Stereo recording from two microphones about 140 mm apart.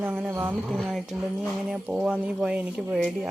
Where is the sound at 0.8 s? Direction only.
Centre (ahead or behind).